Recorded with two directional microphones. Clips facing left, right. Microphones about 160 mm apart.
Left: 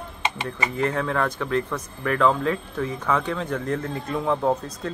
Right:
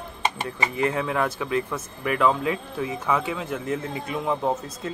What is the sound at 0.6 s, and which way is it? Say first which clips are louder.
A man's voice: even; 10° right (ahead or behind).